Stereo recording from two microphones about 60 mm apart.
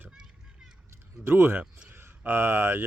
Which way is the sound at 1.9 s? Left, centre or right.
Right.